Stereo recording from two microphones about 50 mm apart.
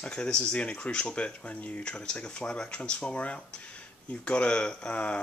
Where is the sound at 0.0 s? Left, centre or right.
Centre.